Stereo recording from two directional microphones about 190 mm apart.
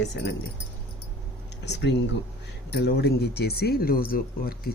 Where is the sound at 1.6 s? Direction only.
65° left (ahead or behind).